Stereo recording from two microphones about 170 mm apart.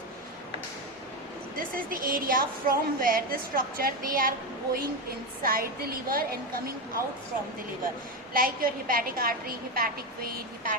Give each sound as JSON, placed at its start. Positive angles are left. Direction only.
{"t": 1.5, "sound": "a woman's voice", "side_deg": -55}
{"t": 8.3, "sound": "a woman's voice", "side_deg": -55}